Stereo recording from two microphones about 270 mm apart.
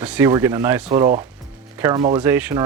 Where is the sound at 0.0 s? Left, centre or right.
Centre.